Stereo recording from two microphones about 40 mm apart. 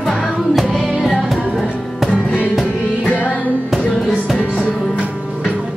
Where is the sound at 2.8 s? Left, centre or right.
Left.